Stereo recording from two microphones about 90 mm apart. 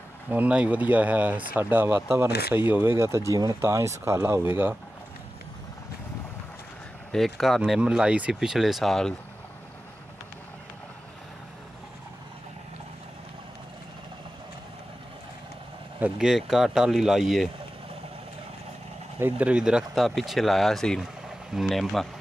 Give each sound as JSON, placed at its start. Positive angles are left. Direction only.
{"t": 0.3, "sound": "speech", "side_deg": -15}
{"t": 3.3, "sound": "speech", "side_deg": -45}
{"t": 3.6, "sound": "speech", "side_deg": -35}
{"t": 7.1, "sound": "speech", "side_deg": 5}
{"t": 7.8, "sound": "speech", "side_deg": -10}
{"t": 16.2, "sound": "speech", "side_deg": -5}
{"t": 19.1, "sound": "speech", "side_deg": -20}